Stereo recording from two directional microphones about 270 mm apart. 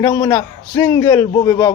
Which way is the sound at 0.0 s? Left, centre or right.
Centre.